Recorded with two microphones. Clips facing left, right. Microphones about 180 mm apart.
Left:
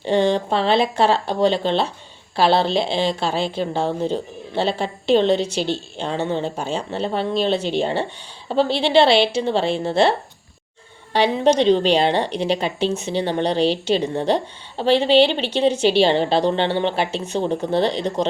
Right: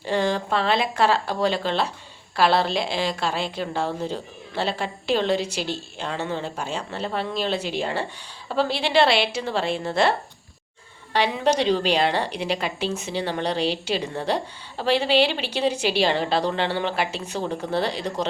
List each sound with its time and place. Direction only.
0.0 s a woman's voice: 25° left (ahead or behind)
17.1 s speech: 5° right (ahead or behind)
17.3 s a woman's voice: 25° left (ahead or behind)